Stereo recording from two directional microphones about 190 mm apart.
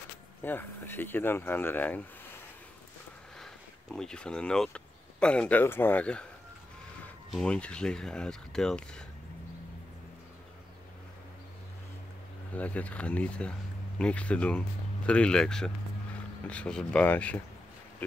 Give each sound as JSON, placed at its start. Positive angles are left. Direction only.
{"t": 0.4, "sound": "speech", "side_deg": 10}
{"t": 3.9, "sound": "speech", "side_deg": 5}
{"t": 12.5, "sound": "speech", "side_deg": 5}